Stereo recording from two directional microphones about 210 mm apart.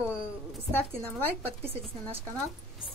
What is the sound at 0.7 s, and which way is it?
Speech, 10° left (ahead or behind).